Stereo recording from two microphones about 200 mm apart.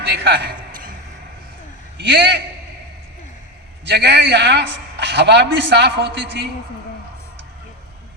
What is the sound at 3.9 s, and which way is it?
A man's voice, 55° right (ahead or behind).